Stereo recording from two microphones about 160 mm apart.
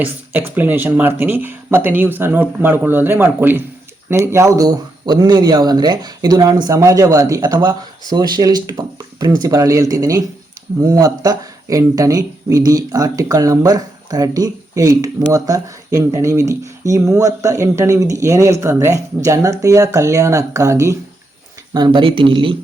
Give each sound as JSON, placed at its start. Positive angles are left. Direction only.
{"t": 0.0, "sound": "speech", "side_deg": -10}